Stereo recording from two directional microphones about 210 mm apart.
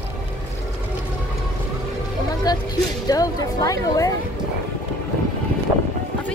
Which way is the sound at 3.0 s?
20° left (ahead or behind).